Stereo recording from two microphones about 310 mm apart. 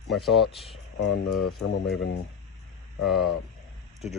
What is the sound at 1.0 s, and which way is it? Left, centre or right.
Speech, left.